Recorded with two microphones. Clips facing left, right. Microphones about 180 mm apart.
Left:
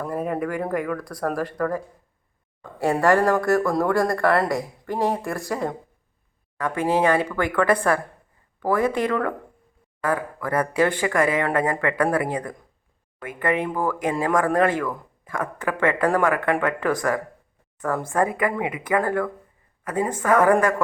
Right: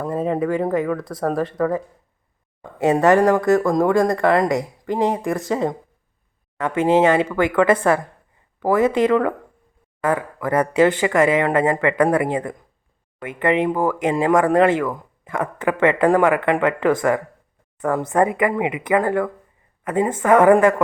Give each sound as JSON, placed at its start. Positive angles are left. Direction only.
{"t": 0.0, "sound": "speech", "side_deg": -25}
{"t": 11.0, "sound": "a woman's voice", "side_deg": -20}